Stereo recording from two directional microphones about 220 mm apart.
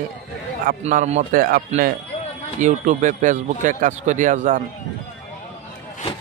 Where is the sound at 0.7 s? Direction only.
35° right (ahead or behind).